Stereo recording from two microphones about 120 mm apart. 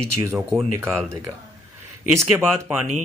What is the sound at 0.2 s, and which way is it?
Speech, 20° right (ahead or behind).